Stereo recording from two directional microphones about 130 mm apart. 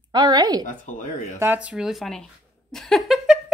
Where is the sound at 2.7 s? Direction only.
5° left (ahead or behind).